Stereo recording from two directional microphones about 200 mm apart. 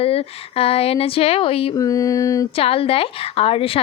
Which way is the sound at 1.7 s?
15° left (ahead or behind).